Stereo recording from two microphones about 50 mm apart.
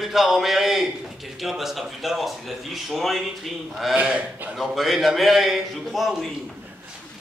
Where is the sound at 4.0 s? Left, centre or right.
Right.